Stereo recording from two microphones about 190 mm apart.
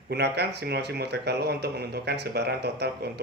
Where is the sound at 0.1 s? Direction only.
60° right (ahead or behind).